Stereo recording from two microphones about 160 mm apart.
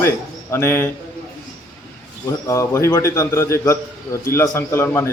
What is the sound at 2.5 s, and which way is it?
A man's voice, 20° left (ahead or behind).